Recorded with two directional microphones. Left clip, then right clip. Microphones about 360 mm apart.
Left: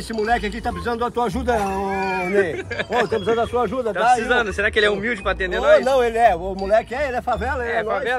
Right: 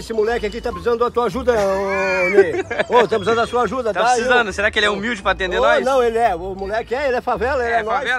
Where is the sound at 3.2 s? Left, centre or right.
Right.